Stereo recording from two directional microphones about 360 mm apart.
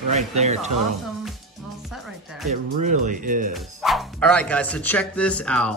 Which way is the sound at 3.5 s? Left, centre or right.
Centre.